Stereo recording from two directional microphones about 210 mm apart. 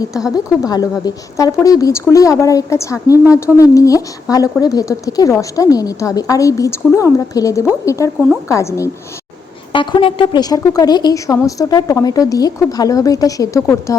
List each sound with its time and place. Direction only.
0.6 s speech: 15° left (ahead or behind)